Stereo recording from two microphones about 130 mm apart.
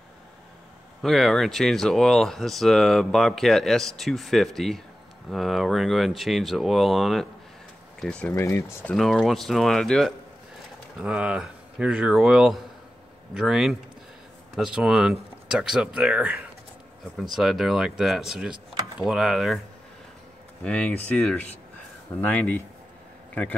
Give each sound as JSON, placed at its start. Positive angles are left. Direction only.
{"t": 1.0, "sound": "speech", "side_deg": 0}
{"t": 8.4, "sound": "speech", "side_deg": 20}
{"t": 8.9, "sound": "speech", "side_deg": 0}
{"t": 11.0, "sound": "speech", "side_deg": -5}
{"t": 20.6, "sound": "speech", "side_deg": 10}